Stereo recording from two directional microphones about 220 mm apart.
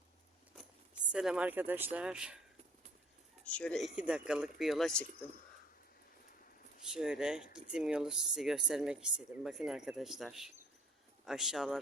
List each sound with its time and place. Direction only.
1.1 s speech: 5° right (ahead or behind)
3.4 s speech: 5° left (ahead or behind)
6.9 s speech: 5° right (ahead or behind)